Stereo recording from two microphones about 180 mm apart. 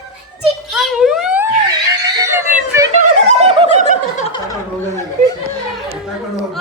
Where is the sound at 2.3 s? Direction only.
15° right (ahead or behind).